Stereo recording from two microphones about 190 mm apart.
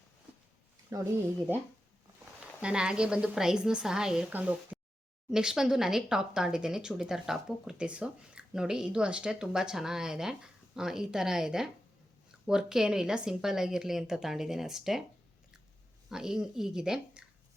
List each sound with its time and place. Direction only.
0.9 s speech: 20° right (ahead or behind)
2.6 s speech: 5° right (ahead or behind)
16.0 s speech: 5° right (ahead or behind)